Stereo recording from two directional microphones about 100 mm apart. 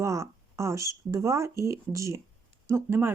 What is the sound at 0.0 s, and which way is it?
Speech, 30° right (ahead or behind).